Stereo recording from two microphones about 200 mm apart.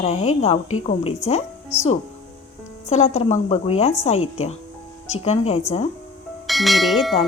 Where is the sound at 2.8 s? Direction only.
35° left (ahead or behind).